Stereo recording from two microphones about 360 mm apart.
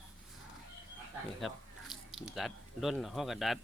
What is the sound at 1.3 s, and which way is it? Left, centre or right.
Speech, centre.